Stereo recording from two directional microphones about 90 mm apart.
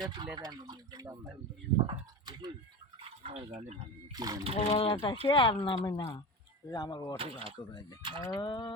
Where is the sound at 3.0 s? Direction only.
90° right.